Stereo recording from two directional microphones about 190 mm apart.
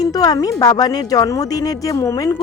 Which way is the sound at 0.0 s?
20° left (ahead or behind).